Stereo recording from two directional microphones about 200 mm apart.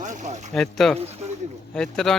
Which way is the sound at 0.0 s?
40° right (ahead or behind).